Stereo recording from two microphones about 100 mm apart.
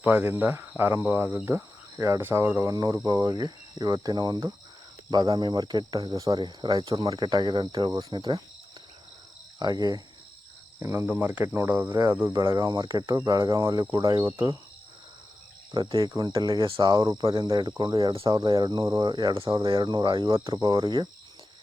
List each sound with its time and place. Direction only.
0.0 s speech: 20° right (ahead or behind)
1.5 s cricket: 25° right (ahead or behind); by 4.5 s 40° right (ahead or behind)
5.1 s speech: 40° right (ahead or behind)
9.6 s cricket: 45° right (ahead or behind)
10.8 s speech: 25° right (ahead or behind)
11.9 s cricket: 40° right (ahead or behind)
15.7 s speech: 50° right (ahead or behind)
18.1 s speech: 60° right (ahead or behind)
18.3 s speech: 45° right (ahead or behind)